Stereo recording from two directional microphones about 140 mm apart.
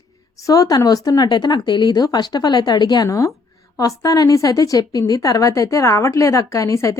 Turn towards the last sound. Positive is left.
turn(degrees=20)  # may be behind; listen again after turning